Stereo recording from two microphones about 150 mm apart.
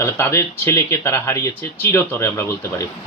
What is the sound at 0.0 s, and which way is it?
Speech, 15° left (ahead or behind).